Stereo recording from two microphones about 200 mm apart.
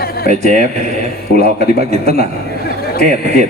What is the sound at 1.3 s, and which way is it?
A man's voice, 50° left (ahead or behind).